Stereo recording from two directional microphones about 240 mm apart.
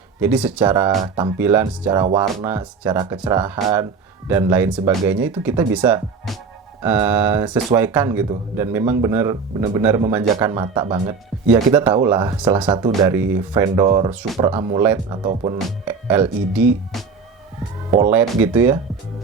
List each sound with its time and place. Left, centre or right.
0.2 s speech: centre
0.9 s speech: right
1.4 s speech: centre
15.5 s speech: centre
18.1 s speech: centre